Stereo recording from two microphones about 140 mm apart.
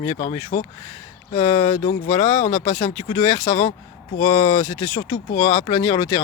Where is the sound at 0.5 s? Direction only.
55° left (ahead or behind).